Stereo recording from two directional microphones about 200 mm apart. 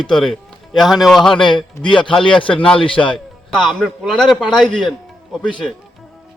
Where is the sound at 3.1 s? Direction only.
Centre (ahead or behind).